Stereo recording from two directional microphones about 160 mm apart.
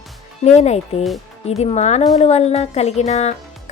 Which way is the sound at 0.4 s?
45° left (ahead or behind).